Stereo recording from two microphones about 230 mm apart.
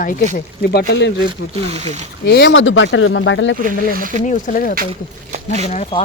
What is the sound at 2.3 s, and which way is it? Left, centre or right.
Speech, left.